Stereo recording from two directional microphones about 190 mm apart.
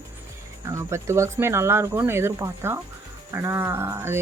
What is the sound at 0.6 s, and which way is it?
Speech, 15° right (ahead or behind).